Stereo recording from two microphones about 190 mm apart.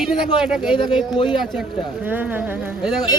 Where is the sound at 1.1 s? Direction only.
25° left (ahead or behind).